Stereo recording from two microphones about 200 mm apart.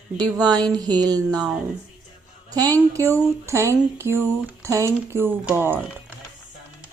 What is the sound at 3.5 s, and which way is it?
Speech, 15° right (ahead or behind).